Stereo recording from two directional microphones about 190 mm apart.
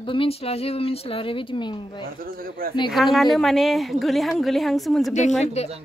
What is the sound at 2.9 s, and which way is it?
A woman's voice, centre (ahead or behind).